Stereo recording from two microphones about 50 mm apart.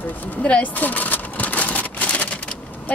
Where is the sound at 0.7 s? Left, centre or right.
Left.